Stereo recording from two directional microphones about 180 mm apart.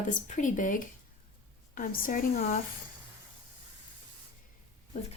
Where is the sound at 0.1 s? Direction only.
45° left (ahead or behind).